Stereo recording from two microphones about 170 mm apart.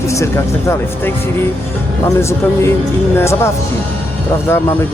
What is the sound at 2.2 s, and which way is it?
Speech, 15° left (ahead or behind).